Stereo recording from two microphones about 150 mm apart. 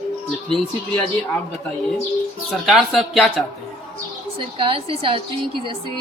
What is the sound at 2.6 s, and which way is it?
Speech, centre (ahead or behind).